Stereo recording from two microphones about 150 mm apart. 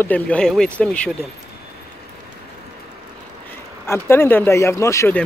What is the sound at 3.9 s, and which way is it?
Speech, 15° left (ahead or behind).